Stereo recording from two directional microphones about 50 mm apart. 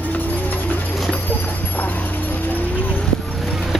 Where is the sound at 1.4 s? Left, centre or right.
Left.